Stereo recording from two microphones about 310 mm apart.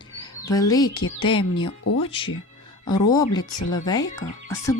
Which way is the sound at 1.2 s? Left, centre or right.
Centre.